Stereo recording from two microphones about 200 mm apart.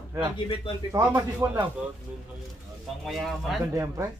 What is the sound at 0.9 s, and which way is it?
Speech, 15° right (ahead or behind).